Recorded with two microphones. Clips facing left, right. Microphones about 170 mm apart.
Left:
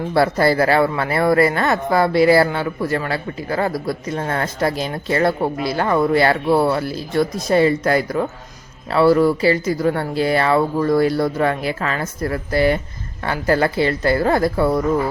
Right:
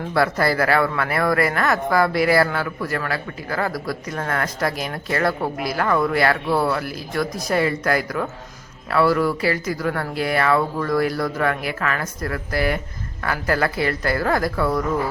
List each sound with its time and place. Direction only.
0.1 s speech: 30° left (ahead or behind)